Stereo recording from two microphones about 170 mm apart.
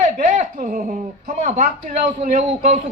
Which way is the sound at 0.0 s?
50° right (ahead or behind).